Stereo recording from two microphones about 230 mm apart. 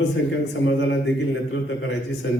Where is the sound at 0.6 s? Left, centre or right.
Left.